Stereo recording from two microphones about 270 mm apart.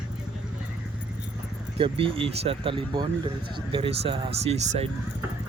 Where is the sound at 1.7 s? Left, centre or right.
Centre.